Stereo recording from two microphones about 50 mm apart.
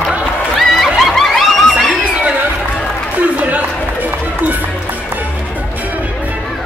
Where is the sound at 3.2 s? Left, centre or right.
Right.